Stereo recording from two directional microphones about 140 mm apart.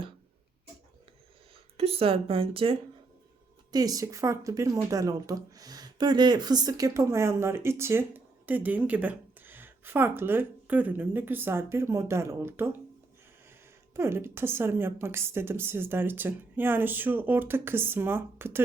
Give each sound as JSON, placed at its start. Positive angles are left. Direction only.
{"t": 1.7, "sound": "speech", "side_deg": -45}
{"t": 3.7, "sound": "speech", "side_deg": -25}
{"t": 13.9, "sound": "a woman's voice", "side_deg": -20}